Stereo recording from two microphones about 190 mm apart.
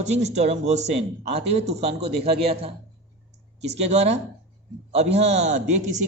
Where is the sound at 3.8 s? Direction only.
35° right (ahead or behind).